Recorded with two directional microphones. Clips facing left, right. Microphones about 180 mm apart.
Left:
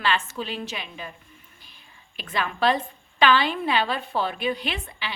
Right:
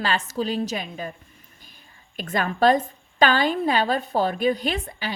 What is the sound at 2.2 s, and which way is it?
A woman's voice, 45° right (ahead or behind).